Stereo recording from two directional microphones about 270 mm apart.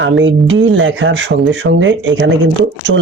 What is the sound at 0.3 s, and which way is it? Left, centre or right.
Speech, right.